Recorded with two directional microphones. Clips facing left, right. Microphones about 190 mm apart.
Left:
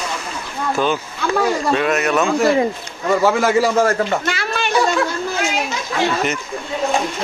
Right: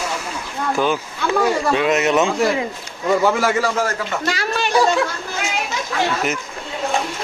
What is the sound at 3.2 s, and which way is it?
Speech, 5° left (ahead or behind).